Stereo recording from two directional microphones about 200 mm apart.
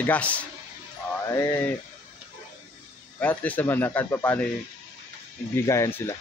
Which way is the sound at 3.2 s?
5° left (ahead or behind).